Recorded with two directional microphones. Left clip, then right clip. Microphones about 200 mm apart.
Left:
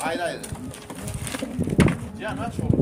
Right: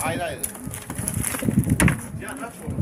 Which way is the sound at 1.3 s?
5° right (ahead or behind).